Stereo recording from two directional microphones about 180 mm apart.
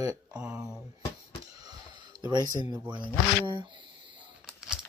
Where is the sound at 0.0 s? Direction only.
20° right (ahead or behind).